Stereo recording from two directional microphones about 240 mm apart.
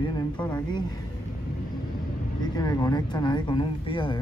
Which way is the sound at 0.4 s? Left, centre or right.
Centre.